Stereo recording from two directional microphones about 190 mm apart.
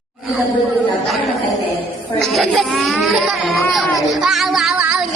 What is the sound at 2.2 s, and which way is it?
Speech, centre (ahead or behind).